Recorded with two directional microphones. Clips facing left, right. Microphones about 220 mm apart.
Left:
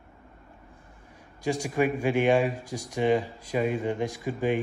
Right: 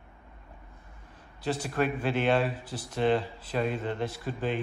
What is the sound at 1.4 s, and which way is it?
Speech, 10° left (ahead or behind).